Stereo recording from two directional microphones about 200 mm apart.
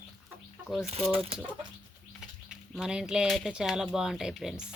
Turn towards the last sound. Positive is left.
turn(degrees=0)  # may be behind; listen again after turning